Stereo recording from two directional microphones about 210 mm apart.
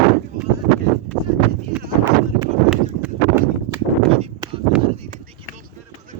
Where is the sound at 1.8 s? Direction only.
10° right (ahead or behind).